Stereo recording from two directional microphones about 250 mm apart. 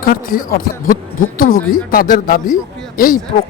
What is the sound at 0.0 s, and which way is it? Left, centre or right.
Speech, left.